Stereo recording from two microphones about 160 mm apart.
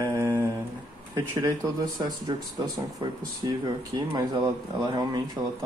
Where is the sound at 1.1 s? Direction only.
15° right (ahead or behind).